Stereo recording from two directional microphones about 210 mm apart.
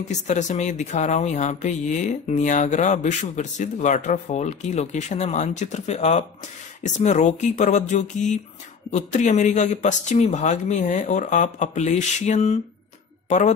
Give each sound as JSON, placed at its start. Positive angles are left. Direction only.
{"t": 0.1, "sound": "speech", "side_deg": 35}